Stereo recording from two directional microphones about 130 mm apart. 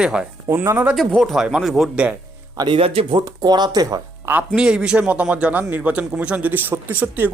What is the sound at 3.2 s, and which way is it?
Speech, 30° right (ahead or behind).